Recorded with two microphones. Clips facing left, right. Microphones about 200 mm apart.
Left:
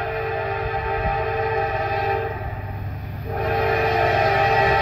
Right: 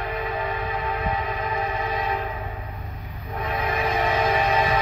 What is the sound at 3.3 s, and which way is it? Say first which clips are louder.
Music: left 6 dB; 40° left (ahead or behind).